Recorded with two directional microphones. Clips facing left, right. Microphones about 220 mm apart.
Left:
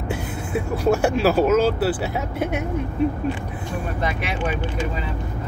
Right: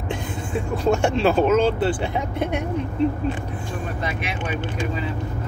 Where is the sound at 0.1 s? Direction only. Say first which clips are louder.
Left 1 dB; 10° left (ahead or behind).